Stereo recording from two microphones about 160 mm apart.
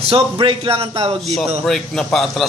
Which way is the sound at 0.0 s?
35° right (ahead or behind).